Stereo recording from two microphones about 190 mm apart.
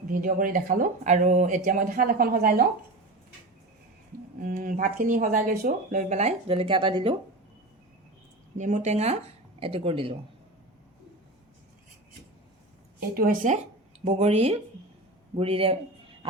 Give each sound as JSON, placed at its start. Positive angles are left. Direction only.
{"t": 0.1, "sound": "speech", "side_deg": -45}
{"t": 4.4, "sound": "speech", "side_deg": -45}
{"t": 8.5, "sound": "speech", "side_deg": -40}
{"t": 13.1, "sound": "speech", "side_deg": -45}
{"t": 14.0, "sound": "speech", "side_deg": -35}